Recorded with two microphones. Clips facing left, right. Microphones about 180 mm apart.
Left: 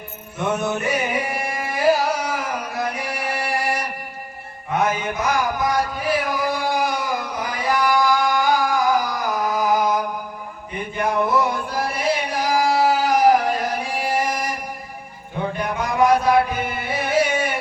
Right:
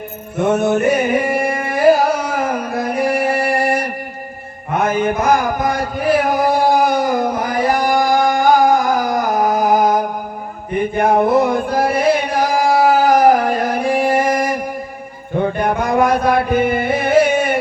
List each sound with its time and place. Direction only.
0.3 s carnatic music: 55° right (ahead or behind)
4.7 s a sound: 55° right (ahead or behind)
10.9 s music: 55° right (ahead or behind)